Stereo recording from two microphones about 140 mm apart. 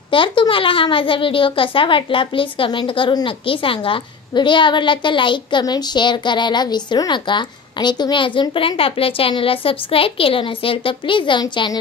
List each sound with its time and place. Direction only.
0.1 s a child's voice: 35° left (ahead or behind)